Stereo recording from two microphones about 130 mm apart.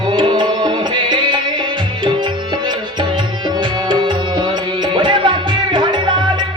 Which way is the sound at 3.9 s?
35° right (ahead or behind).